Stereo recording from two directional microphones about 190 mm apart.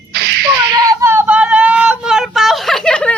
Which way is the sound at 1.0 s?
10° right (ahead or behind).